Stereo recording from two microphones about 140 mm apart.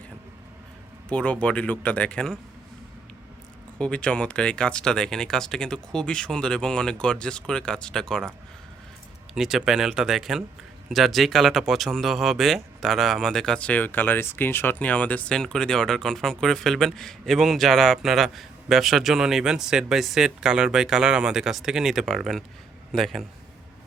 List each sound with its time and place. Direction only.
1.1 s speech: 10° left (ahead or behind)
3.8 s speech: 10° left (ahead or behind)
9.3 s speech: 5° right (ahead or behind)